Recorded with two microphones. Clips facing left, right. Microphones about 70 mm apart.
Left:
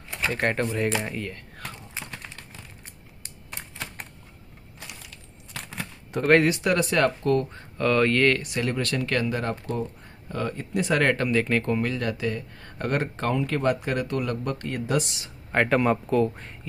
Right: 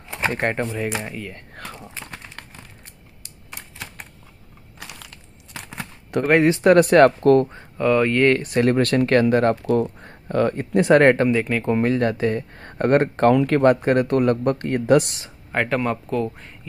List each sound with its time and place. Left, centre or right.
0.1 s speech: right
4.7 s ratchet: right
5.5 s a sound: centre
6.5 s speech: right
7.4 s speech: centre
8.4 s speech: right
9.8 s speech: right
11.1 s speech: right
11.3 s speech: centre
11.7 s speech: right
15.5 s speech: centre